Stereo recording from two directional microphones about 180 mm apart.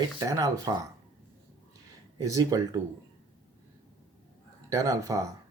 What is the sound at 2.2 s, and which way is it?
Speech, 20° right (ahead or behind).